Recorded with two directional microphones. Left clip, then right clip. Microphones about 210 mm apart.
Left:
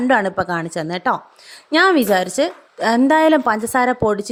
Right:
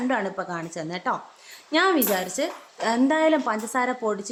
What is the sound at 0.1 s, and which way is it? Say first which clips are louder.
A woman's voice: left 13 dB; 40° left (ahead or behind).